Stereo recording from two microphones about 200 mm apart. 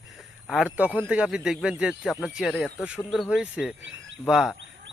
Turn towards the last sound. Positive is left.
turn(degrees=0)  # may be behind; listen again after turning